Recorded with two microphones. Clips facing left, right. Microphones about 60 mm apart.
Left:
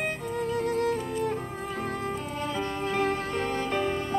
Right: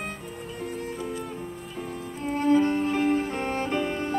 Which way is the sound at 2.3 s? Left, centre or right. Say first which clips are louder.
Right 13 dB; right.